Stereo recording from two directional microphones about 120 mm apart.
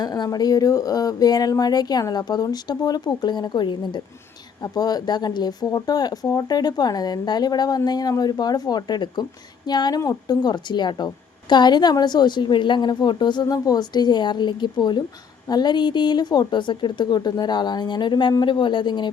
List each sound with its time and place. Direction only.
0.0 s a woman's voice: 35° left (ahead or behind)